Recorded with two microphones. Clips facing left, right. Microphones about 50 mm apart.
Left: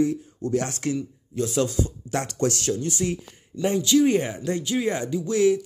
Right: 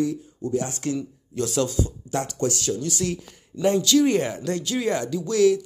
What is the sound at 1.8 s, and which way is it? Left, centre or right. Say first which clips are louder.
Speech: even; left.